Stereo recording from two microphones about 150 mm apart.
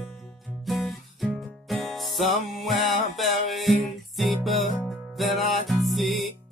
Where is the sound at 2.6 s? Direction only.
Centre (ahead or behind).